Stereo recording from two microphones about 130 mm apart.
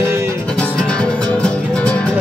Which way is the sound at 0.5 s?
5° left (ahead or behind).